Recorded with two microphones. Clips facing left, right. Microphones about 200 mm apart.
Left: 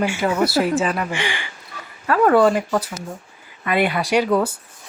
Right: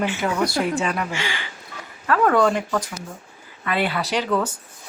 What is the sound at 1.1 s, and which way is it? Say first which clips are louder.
Speech: left 3 dB; 15° left (ahead or behind).